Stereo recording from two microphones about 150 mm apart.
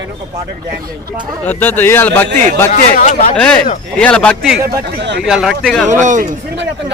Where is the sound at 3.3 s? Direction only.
5° left (ahead or behind).